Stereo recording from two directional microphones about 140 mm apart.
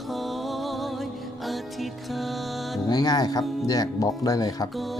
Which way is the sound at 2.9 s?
30° left (ahead or behind).